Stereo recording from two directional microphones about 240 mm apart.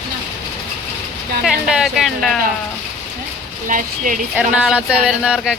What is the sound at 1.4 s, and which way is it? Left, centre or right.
Speech, centre.